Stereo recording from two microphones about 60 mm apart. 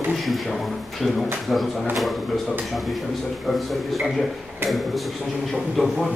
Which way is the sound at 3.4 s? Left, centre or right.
Centre.